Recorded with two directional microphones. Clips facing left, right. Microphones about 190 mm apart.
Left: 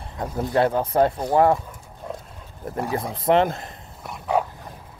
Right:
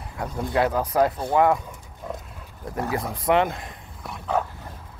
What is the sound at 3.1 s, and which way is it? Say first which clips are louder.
Speech: left 3 dB; 30° left (ahead or behind).